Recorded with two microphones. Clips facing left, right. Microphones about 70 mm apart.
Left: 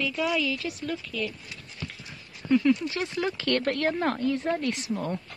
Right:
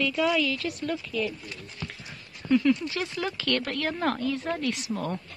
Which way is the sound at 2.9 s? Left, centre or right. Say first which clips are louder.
Left 2 dB; left.